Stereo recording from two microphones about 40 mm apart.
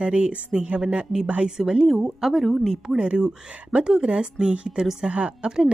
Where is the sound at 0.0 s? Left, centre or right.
Right.